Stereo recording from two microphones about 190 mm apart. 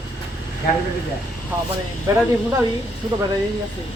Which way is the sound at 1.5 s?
10° right (ahead or behind).